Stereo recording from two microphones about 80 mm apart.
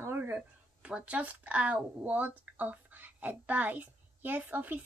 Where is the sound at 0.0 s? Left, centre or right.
Right.